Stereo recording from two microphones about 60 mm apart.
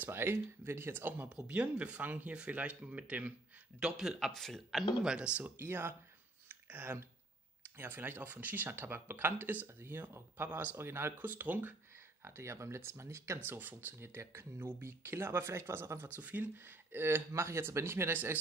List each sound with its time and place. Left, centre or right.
0.0 s speech: right
1.3 s speech: right
3.8 s speech: centre
4.3 s speech: centre
5.6 s speech: right
11.1 s speech: right
12.2 s speech: right
13.5 s speech: right
16.2 s speech: right
16.6 s speech: right
17.3 s speech: right